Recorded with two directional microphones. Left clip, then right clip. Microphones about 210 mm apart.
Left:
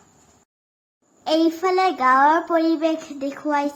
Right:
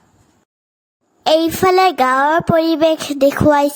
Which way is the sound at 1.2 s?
55° right (ahead or behind).